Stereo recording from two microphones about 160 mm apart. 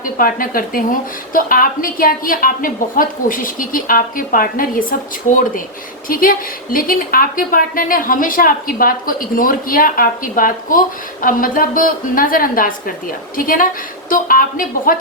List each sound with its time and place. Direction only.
0.0 s a woman's voice: 60° left (ahead or behind)